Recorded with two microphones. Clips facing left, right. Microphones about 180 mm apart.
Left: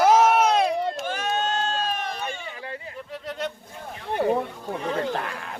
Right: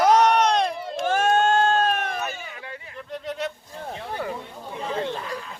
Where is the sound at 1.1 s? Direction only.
50° right (ahead or behind).